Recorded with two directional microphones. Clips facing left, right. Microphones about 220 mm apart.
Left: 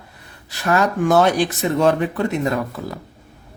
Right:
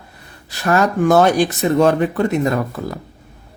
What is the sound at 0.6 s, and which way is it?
A man's voice, 45° right (ahead or behind).